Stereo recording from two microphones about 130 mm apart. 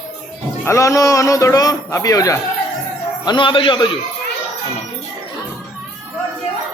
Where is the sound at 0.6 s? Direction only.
25° left (ahead or behind); by 3.9 s 40° left (ahead or behind).